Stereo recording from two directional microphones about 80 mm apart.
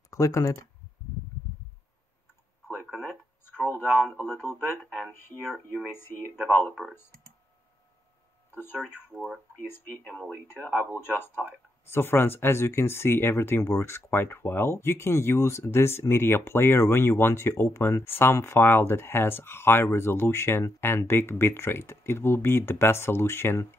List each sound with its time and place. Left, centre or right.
0.1 s speech: left
3.4 s speech: left
4.8 s speech: centre
5.9 s speech: left
6.7 s speech: centre
8.5 s speech: left
9.8 s speech: centre
11.0 s speech: left